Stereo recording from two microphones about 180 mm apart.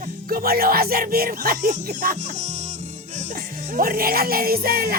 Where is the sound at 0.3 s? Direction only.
55° right (ahead or behind).